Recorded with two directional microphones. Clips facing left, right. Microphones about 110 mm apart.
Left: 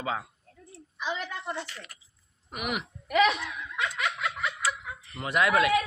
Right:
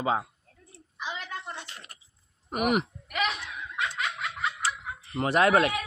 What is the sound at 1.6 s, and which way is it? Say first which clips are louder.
Speech: left 2 dB; 25° right (ahead or behind).